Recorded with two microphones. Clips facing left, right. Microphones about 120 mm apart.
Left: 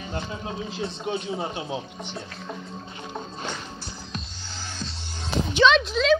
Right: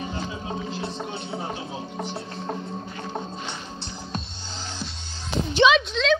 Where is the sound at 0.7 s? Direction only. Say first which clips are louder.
Left 2 dB; 70° right (ahead or behind).